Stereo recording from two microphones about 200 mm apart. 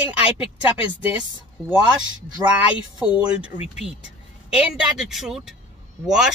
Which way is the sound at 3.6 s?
30° left (ahead or behind).